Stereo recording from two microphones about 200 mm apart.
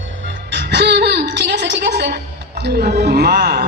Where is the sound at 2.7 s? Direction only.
45° right (ahead or behind).